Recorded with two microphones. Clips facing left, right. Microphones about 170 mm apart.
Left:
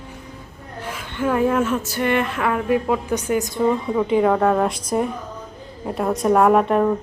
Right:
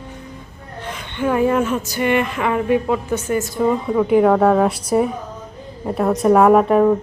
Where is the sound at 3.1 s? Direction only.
15° left (ahead or behind).